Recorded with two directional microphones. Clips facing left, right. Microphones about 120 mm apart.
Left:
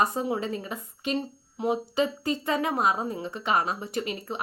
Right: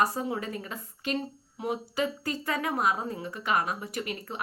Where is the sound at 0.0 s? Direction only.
20° left (ahead or behind).